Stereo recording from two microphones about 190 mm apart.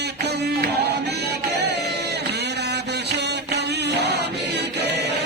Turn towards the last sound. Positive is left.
turn(degrees=-65)  # may be behind; listen again after turning